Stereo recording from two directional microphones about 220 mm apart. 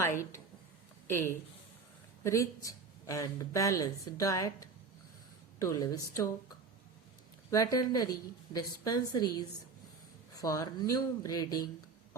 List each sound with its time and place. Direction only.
0.2 s speech: 10° left (ahead or behind)
7.5 s speech: 15° left (ahead or behind)
10.3 s speech: 15° left (ahead or behind)